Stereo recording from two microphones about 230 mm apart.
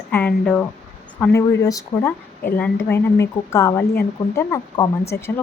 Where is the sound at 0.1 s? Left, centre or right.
Centre.